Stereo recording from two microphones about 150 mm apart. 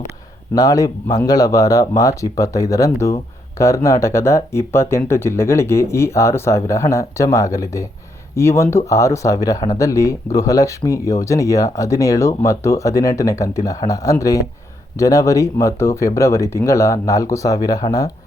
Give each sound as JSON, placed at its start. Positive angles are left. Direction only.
{"t": 0.5, "sound": "speech", "side_deg": 25}